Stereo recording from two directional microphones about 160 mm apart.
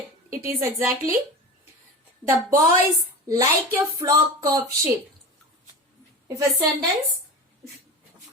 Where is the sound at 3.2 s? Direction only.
20° right (ahead or behind).